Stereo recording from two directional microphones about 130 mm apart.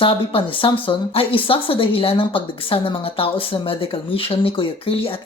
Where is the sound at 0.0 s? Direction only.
45° left (ahead or behind).